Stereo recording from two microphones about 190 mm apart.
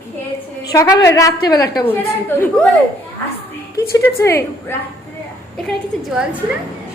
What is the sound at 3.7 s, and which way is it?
A woman's voice, 15° left (ahead or behind).